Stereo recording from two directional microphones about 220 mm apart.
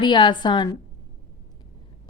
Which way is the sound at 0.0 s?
20° left (ahead or behind).